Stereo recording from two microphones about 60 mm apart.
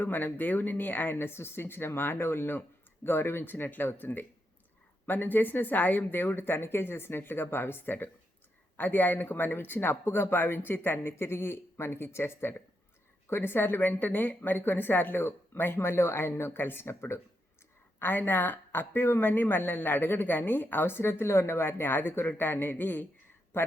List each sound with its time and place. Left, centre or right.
0.0 s speech: left